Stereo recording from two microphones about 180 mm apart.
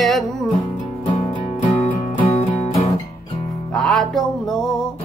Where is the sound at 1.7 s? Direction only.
30° left (ahead or behind).